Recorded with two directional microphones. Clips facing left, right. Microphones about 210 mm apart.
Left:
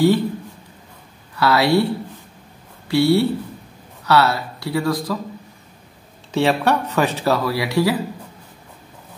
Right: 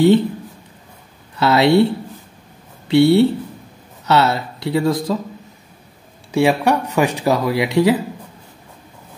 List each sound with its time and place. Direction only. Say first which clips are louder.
1.3 s speech: right 3 dB; 20° right (ahead or behind)
2.9 s speech: right 4 dB; 20° right (ahead or behind)
6.3 s speech: right 2 dB; 10° right (ahead or behind)